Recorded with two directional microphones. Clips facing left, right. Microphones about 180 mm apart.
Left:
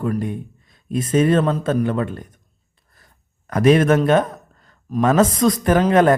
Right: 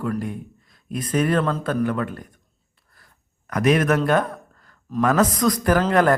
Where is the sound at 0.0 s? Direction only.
20° left (ahead or behind).